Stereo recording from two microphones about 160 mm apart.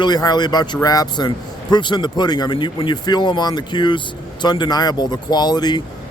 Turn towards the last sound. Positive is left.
turn(degrees=25)  # may be behind; listen again after turning